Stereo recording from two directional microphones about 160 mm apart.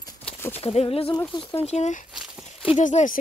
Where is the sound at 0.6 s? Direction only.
35° left (ahead or behind).